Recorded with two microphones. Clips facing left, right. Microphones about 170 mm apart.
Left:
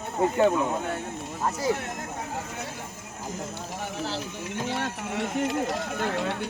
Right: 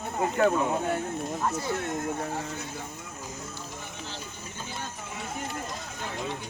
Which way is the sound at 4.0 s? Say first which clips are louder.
Left 8 dB; 90° left.